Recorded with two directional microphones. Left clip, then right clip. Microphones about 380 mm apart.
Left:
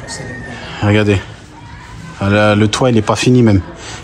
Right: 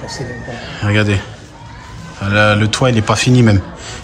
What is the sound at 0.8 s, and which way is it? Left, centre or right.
Speech, centre.